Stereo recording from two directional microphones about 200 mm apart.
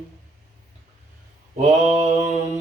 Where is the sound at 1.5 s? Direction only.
35° right (ahead or behind).